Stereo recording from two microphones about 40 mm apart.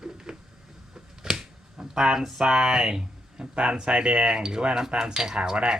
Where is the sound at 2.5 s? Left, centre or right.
Centre.